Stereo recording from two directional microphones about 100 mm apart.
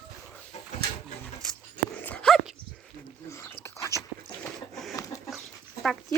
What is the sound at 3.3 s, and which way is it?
Dog, 30° left (ahead or behind).